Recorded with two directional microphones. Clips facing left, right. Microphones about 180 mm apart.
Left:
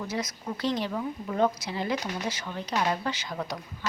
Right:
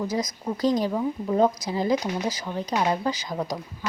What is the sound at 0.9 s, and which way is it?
Speech, 25° right (ahead or behind).